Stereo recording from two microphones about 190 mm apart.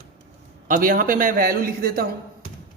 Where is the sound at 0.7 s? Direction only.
45° right (ahead or behind).